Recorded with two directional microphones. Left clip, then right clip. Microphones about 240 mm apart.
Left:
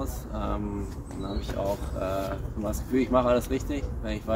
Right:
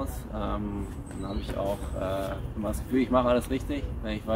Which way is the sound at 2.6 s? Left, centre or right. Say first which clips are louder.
Left 1 dB; centre.